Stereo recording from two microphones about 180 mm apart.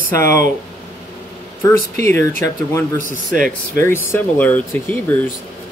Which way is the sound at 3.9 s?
10° left (ahead or behind).